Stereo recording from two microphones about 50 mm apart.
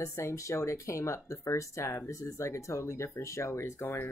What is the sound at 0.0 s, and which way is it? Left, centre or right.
Speech, left.